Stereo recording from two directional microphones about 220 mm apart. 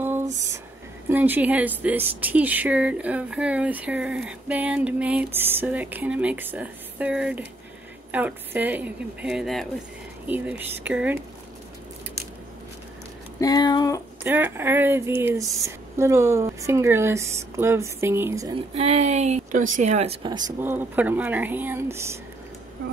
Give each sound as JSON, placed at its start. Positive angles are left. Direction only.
{"t": 1.0, "sound": "a woman's voice", "side_deg": -10}
{"t": 13.4, "sound": "speech", "side_deg": 15}
{"t": 14.2, "sound": "a woman's voice", "side_deg": -10}
{"t": 18.8, "sound": "a woman's voice", "side_deg": -30}